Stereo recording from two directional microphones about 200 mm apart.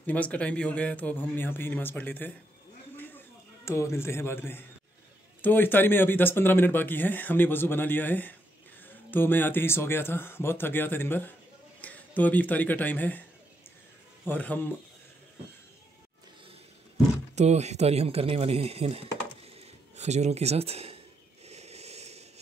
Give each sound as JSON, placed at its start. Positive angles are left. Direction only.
{"t": 0.0, "sound": "speech", "side_deg": 5}
{"t": 3.6, "sound": "speech", "side_deg": 15}
{"t": 14.2, "sound": "speech", "side_deg": 10}
{"t": 16.9, "sound": "speech", "side_deg": -35}
{"t": 21.5, "sound": "a sound", "side_deg": -30}